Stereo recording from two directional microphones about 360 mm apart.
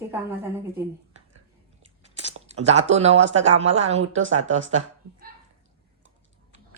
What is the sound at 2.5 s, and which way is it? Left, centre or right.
A woman's voice, centre.